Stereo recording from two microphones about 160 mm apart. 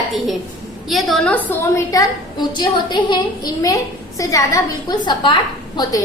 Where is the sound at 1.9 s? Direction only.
25° left (ahead or behind).